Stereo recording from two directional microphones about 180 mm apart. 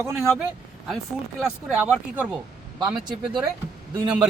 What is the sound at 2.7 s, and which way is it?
Speech, 25° right (ahead or behind).